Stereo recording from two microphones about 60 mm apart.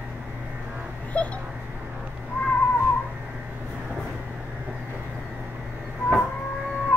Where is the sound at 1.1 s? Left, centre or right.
Centre.